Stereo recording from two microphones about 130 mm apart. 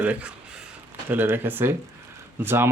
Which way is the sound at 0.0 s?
10° right (ahead or behind).